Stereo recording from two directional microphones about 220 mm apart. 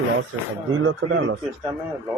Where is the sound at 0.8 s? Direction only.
60° right (ahead or behind).